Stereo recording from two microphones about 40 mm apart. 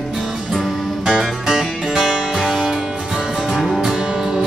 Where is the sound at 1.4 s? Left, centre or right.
Centre.